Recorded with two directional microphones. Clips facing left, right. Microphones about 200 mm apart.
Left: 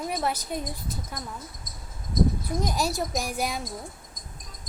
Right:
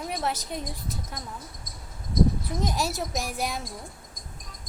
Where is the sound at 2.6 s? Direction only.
Centre (ahead or behind).